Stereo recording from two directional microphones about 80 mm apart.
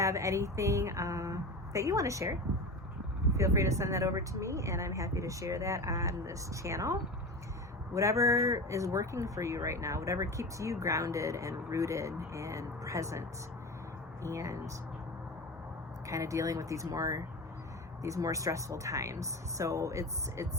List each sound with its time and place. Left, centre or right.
0.0 s speech: right
16.0 s speech: right